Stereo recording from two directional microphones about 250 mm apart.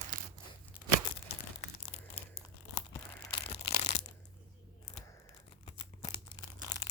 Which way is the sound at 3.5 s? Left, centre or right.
Left.